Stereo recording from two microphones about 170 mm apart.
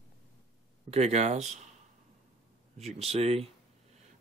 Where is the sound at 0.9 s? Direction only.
40° right (ahead or behind).